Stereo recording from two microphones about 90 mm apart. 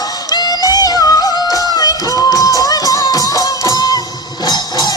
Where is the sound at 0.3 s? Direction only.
50° left (ahead or behind).